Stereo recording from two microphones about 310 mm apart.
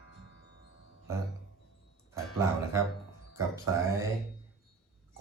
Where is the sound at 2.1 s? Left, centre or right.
Centre.